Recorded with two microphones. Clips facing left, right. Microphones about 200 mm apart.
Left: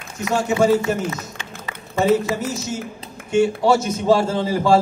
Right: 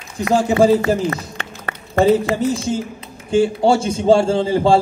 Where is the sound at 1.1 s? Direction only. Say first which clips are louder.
Right 4 dB; 60° right (ahead or behind).